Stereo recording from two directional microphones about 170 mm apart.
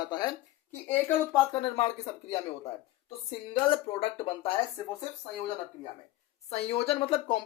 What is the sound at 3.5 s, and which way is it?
Speech, 30° left (ahead or behind).